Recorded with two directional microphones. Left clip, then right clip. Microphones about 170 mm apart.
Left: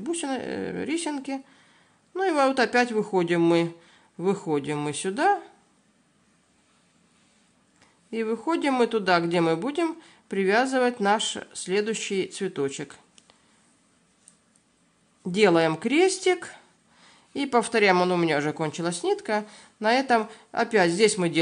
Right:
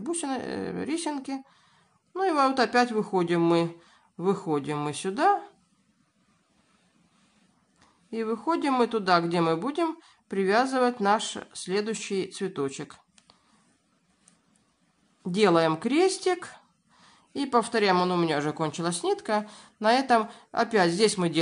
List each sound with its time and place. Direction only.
0.0 s speech: 10° left (ahead or behind)
7.8 s speech: 15° left (ahead or behind)
15.2 s speech: 15° left (ahead or behind)